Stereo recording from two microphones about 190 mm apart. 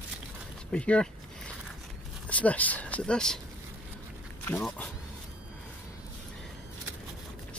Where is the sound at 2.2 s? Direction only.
5° left (ahead or behind).